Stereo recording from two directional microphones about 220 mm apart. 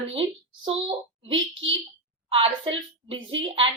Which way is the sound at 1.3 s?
60° right (ahead or behind).